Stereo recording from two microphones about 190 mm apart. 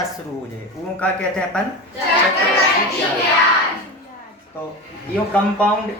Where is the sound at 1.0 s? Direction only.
5° left (ahead or behind).